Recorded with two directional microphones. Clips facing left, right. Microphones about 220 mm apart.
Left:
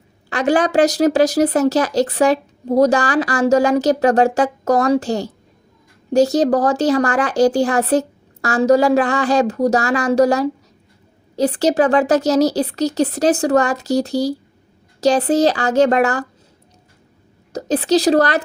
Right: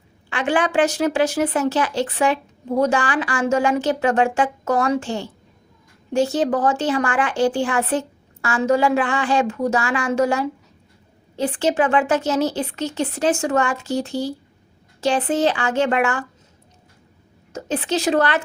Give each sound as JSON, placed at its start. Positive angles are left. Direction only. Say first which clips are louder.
{"t": 0.3, "sound": "speech", "louder": "left 5 dB", "side_deg": 40}
{"t": 17.5, "sound": "speech", "louder": "left 7 dB", "side_deg": 40}